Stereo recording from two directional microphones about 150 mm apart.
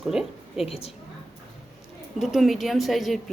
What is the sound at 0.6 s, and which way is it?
Speech, 40° left (ahead or behind).